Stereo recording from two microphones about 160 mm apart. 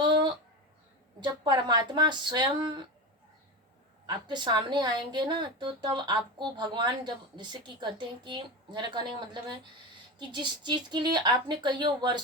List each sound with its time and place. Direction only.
0.0 s a sound: 30° right (ahead or behind)
1.2 s a woman's voice: 25° right (ahead or behind)
4.0 s a woman's voice: 30° right (ahead or behind)